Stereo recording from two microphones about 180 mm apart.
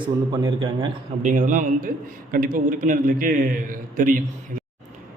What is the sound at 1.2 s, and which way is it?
A man's voice, 45° right (ahead or behind).